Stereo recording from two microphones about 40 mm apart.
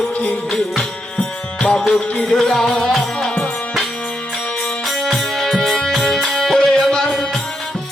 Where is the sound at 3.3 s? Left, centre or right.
Left.